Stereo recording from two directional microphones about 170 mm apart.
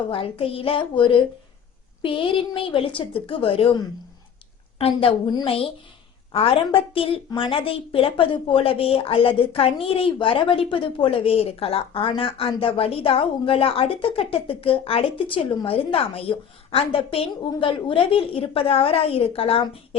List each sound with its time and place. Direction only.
0.1 s a woman's voice: 35° left (ahead or behind)